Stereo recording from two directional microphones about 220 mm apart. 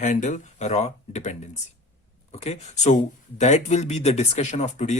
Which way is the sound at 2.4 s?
30° left (ahead or behind).